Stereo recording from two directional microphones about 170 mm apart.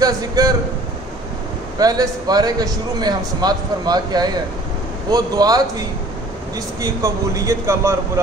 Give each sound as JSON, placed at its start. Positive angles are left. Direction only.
{"t": 0.0, "sound": "a man's voice", "side_deg": -20}
{"t": 1.8, "sound": "a man's voice", "side_deg": -20}